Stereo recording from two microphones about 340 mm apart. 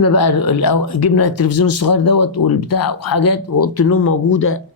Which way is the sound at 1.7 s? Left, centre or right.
Left.